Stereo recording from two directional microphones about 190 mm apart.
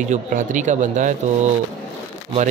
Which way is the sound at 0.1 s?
45° right (ahead or behind).